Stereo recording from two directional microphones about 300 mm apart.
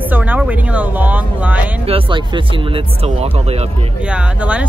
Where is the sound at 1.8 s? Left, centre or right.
Centre.